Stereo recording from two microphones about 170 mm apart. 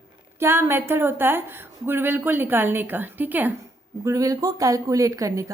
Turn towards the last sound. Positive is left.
turn(degrees=-20)  # may be behind; listen again after turning